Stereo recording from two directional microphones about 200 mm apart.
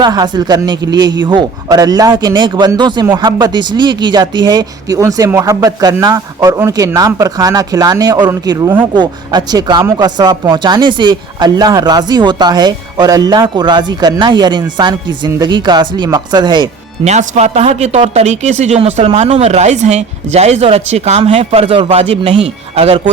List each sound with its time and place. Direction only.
0.0 s speech: 20° right (ahead or behind)
17.0 s speech: 35° right (ahead or behind)